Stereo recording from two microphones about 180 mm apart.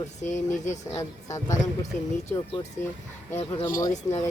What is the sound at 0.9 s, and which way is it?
Speech, 20° left (ahead or behind).